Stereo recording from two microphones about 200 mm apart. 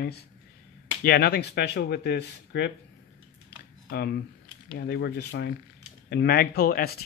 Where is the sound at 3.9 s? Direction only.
55° left (ahead or behind).